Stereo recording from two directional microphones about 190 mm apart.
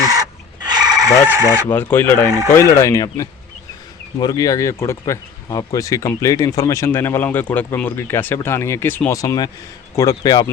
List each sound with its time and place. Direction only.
0.0 s chicken: 20° right (ahead or behind)
1.6 s speech: 10° left (ahead or behind)